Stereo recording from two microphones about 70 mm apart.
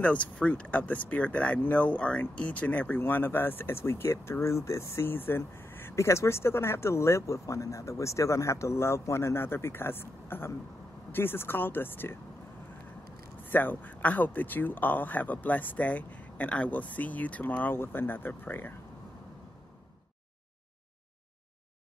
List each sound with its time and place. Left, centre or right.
0.0 s speech: left
13.5 s speech: left